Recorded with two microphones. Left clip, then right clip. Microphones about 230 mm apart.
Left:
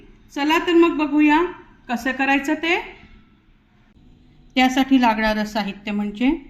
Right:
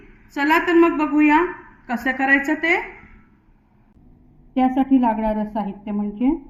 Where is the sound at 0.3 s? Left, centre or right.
Left.